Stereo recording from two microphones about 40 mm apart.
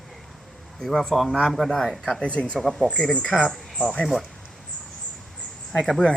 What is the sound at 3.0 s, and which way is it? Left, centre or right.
Speech, centre.